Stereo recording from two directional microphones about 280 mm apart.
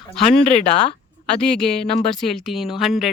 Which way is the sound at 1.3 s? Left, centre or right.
Centre.